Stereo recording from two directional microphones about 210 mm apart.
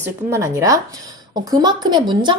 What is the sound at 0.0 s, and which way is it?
A woman's voice, 15° right (ahead or behind).